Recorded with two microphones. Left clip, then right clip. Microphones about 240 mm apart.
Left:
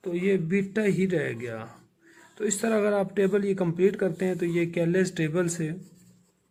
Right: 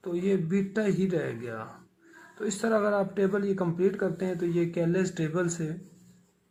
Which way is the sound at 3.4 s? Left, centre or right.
Left.